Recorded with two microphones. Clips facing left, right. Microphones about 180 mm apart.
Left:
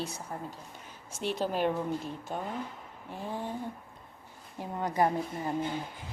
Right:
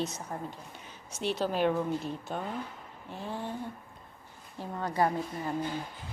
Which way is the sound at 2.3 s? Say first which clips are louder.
Left 3 dB; 5° left (ahead or behind).